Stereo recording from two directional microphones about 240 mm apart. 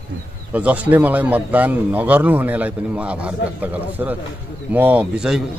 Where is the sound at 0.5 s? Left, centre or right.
Centre.